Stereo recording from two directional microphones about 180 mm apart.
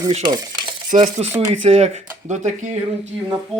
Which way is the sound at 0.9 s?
45° right (ahead or behind).